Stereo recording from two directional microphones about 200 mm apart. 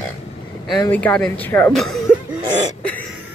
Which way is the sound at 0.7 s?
5° left (ahead or behind).